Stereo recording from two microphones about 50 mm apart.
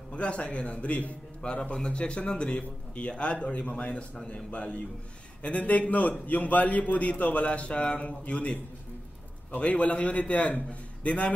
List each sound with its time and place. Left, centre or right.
0.1 s a man's voice: left